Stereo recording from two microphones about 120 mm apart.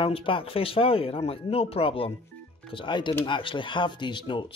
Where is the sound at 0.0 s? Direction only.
45° left (ahead or behind).